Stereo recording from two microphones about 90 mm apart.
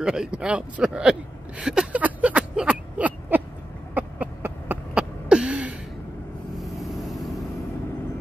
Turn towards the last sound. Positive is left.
turn(degrees=0)  # may be behind; listen again after turning